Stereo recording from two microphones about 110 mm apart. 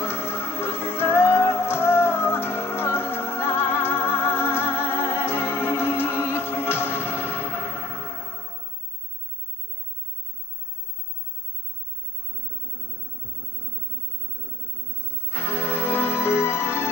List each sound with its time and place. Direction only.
0.0 s music: 20° left (ahead or behind)
14.9 s music: 20° left (ahead or behind)